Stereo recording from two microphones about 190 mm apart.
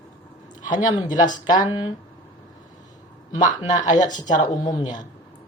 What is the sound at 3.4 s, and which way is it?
Speech, 40° left (ahead or behind).